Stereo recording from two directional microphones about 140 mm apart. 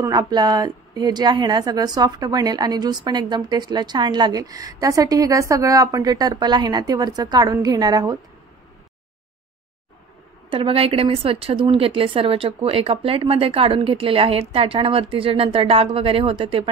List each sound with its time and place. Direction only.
0.0 s a woman's voice: 25° right (ahead or behind)
10.5 s speech: 40° right (ahead or behind)